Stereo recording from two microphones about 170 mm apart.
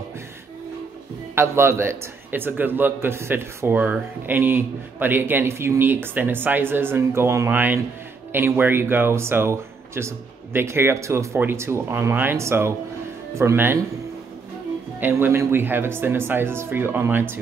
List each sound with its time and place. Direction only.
1.3 s a man's voice: 15° right (ahead or behind)
15.0 s a man's voice: 10° right (ahead or behind)